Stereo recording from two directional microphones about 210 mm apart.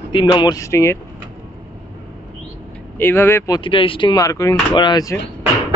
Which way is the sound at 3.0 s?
10° left (ahead or behind).